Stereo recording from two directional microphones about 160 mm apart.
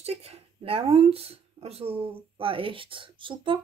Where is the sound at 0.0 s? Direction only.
40° right (ahead or behind).